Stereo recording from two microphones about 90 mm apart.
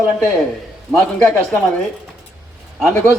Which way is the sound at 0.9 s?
10° left (ahead or behind).